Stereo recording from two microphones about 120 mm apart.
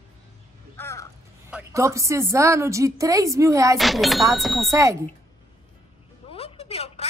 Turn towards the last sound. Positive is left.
turn(degrees=60)  # may be behind; listen again after turning